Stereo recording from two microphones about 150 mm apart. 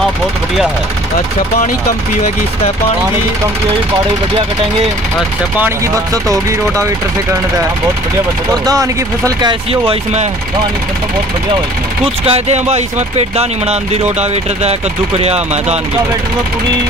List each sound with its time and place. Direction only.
6.2 s speech: 20° right (ahead or behind)
8.6 s speech: 25° right (ahead or behind)
12.0 s speech: 45° right (ahead or behind)